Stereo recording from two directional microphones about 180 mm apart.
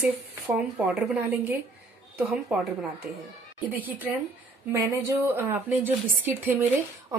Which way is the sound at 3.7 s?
10° right (ahead or behind).